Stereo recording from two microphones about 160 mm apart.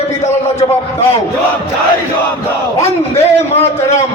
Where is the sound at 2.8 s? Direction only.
40° left (ahead or behind).